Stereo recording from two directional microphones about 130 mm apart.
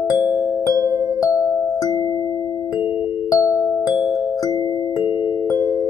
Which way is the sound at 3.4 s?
20° left (ahead or behind).